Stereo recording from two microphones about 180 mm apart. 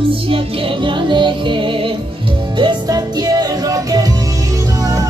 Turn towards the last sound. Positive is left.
turn(degrees=-20)  # may be behind; listen again after turning